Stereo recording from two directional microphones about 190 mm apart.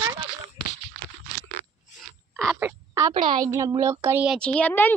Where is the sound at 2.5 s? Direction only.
15° right (ahead or behind).